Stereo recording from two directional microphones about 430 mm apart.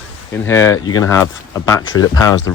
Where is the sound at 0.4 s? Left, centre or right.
Centre.